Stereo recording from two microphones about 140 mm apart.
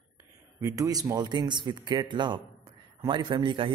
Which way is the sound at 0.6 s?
25° right (ahead or behind).